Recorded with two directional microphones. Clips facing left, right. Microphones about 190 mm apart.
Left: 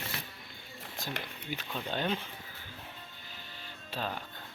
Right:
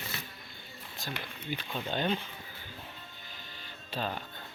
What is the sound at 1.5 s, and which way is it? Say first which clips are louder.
Speech: right 1 dB; 10° right (ahead or behind).